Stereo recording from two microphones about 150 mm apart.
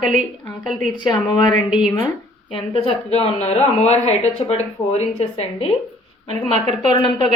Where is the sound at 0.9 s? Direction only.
30° left (ahead or behind).